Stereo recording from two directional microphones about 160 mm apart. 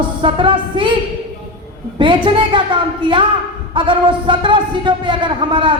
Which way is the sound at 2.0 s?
30° right (ahead or behind).